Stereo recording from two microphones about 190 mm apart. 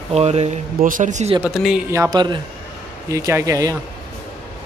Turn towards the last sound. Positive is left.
turn(degrees=-15)  # may be behind; listen again after turning